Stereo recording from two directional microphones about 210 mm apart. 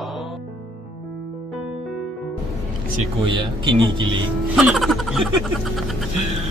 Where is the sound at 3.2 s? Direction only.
25° right (ahead or behind).